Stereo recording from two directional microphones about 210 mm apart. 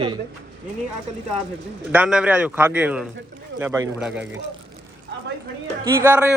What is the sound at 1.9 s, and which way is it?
Speech, 5° right (ahead or behind).